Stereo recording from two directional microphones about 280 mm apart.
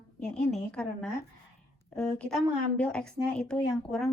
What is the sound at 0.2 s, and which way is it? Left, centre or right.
A woman's voice, centre.